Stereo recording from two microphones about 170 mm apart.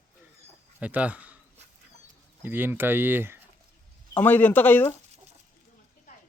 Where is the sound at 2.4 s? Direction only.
10° right (ahead or behind).